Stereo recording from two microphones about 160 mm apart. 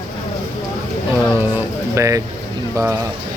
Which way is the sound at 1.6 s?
20° right (ahead or behind).